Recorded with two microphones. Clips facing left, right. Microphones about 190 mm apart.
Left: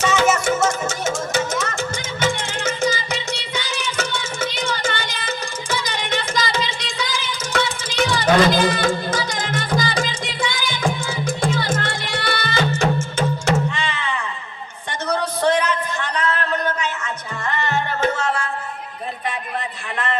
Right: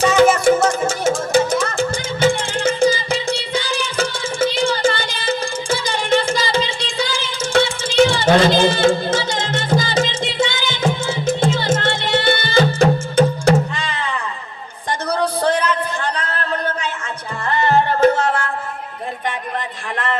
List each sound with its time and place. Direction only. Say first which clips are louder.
0.0 s music: right 6 dB; 35° right (ahead or behind)
14.8 s a sound: right 3 dB; 35° right (ahead or behind)
17.5 s music: right 7 dB; 35° right (ahead or behind)
18.2 s music: right 4 dB; 55° right (ahead or behind)